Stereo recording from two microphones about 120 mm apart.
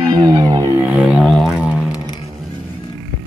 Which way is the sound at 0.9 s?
10° right (ahead or behind).